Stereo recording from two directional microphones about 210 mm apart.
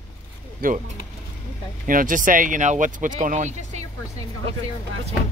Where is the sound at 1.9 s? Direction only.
40° right (ahead or behind).